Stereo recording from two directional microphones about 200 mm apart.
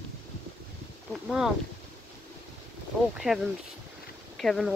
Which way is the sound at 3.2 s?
Centre (ahead or behind).